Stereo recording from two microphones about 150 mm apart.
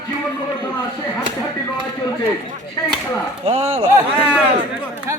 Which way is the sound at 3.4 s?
45° right (ahead or behind).